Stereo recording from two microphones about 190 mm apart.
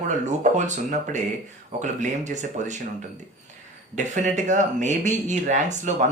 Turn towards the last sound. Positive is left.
turn(degrees=-40)  # may be behind; listen again after turning